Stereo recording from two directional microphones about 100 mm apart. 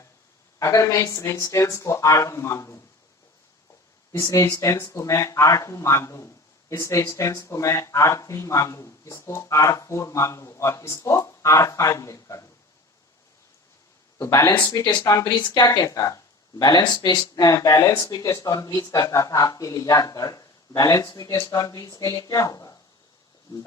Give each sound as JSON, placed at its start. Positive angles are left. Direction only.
{"t": 0.6, "sound": "speech", "side_deg": 30}
{"t": 4.2, "sound": "speech", "side_deg": 30}
{"t": 14.2, "sound": "speech", "side_deg": 35}
{"t": 14.7, "sound": "speech", "side_deg": 45}
{"t": 15.4, "sound": "speech", "side_deg": 45}